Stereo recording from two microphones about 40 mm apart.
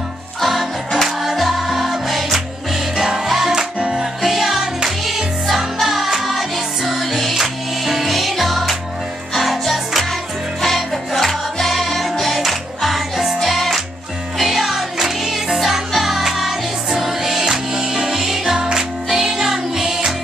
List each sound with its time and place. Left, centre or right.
0.4 s music: centre
3.5 s music: centre
18.6 s music: centre